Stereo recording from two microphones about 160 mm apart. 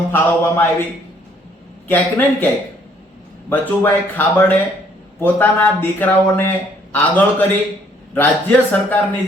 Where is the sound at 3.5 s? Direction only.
10° left (ahead or behind).